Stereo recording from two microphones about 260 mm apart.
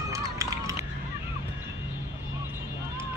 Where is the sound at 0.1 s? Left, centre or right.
Centre.